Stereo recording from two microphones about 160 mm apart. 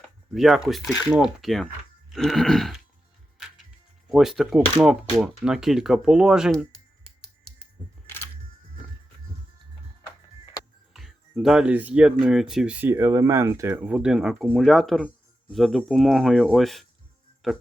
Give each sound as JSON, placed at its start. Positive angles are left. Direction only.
{"t": 0.3, "sound": "speech", "side_deg": 0}
{"t": 4.1, "sound": "speech", "side_deg": 0}
{"t": 10.9, "sound": "speech", "side_deg": 0}